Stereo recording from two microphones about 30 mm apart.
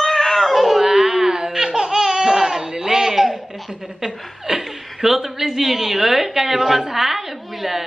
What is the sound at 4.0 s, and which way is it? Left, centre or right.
A child's voice, centre.